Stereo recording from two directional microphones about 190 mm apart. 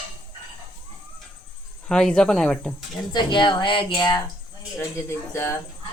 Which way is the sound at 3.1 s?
25° left (ahead or behind).